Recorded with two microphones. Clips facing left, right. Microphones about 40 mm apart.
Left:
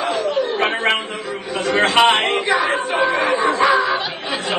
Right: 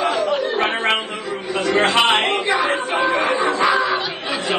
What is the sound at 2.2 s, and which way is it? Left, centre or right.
Speech, left.